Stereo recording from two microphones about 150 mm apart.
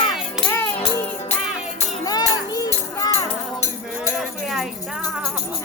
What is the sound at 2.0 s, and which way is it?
Music, 25° left (ahead or behind).